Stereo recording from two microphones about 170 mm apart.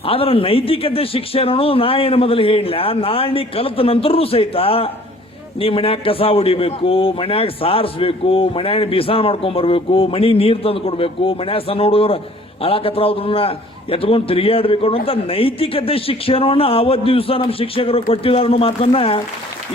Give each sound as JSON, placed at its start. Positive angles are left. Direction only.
{"t": 0.0, "sound": "a man's voice", "side_deg": 35}